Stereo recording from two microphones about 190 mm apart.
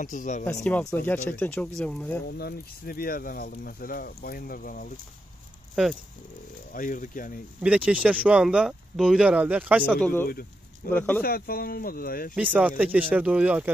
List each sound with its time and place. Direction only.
0.0 s speech: 40° left (ahead or behind)
0.5 s speech: 10° left (ahead or behind)
2.2 s speech: 55° left (ahead or behind)
6.7 s speech: 45° left (ahead or behind)
7.6 s speech: 5° right (ahead or behind)
9.9 s speech: 5° left (ahead or behind)
11.2 s speech: 50° left (ahead or behind)
12.4 s speech: 5° right (ahead or behind)